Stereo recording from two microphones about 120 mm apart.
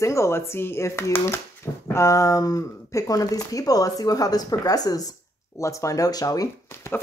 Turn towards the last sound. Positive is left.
turn(degrees=30)  # may be behind; listen again after turning